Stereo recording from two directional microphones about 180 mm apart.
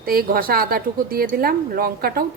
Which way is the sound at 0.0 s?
55° right (ahead or behind).